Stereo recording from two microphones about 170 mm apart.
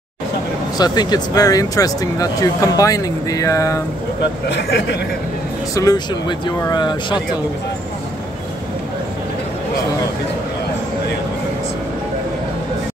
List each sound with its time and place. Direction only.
0.7 s speech: 25° left (ahead or behind)
4.5 s speech: 85° left
5.8 s speech: 25° left (ahead or behind)